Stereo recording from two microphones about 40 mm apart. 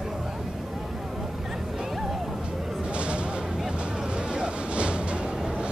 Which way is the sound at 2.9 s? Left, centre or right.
Right.